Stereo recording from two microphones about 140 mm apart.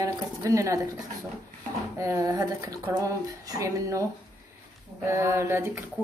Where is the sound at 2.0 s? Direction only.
25° right (ahead or behind).